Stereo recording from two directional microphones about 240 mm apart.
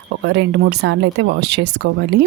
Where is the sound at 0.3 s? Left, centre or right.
Right.